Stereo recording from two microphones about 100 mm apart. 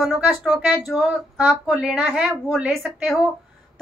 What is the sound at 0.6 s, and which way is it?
Speech, 15° right (ahead or behind).